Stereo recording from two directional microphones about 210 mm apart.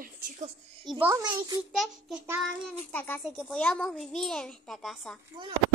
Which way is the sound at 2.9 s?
10° left (ahead or behind).